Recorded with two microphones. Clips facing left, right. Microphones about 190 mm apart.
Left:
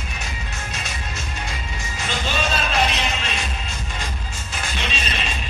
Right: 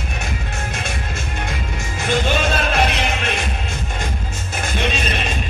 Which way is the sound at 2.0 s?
55° right (ahead or behind).